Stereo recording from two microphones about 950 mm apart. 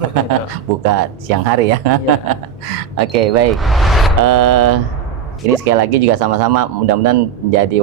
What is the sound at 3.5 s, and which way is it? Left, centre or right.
Speech, centre.